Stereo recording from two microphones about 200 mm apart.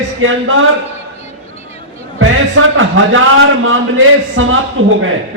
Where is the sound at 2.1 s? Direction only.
85° right.